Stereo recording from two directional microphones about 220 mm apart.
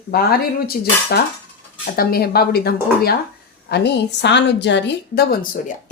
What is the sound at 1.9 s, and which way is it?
A woman's voice, 45° left (ahead or behind).